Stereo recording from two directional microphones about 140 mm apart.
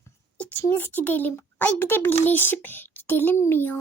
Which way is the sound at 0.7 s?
15° left (ahead or behind).